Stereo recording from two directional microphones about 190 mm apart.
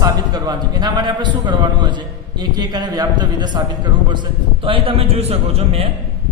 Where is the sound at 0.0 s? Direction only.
20° right (ahead or behind).